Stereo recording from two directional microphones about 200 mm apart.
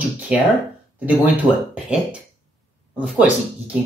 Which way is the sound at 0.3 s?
5° right (ahead or behind).